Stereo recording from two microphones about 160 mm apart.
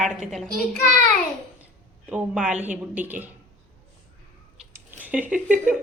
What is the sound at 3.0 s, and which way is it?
Speech, 10° right (ahead or behind).